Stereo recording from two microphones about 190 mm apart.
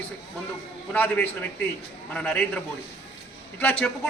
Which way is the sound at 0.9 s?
10° left (ahead or behind).